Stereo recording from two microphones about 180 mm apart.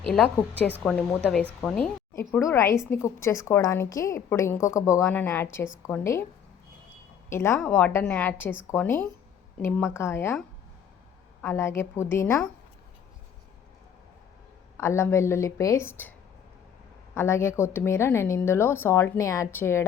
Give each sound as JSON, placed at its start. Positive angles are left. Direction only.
{"t": 0.1, "sound": "a woman's voice", "side_deg": 5}
{"t": 2.1, "sound": "a woman's voice", "side_deg": 15}
{"t": 7.3, "sound": "a woman's voice", "side_deg": 15}
{"t": 11.4, "sound": "a woman's voice", "side_deg": 15}
{"t": 14.8, "sound": "a woman's voice", "side_deg": 15}
{"t": 17.2, "sound": "a woman's voice", "side_deg": 15}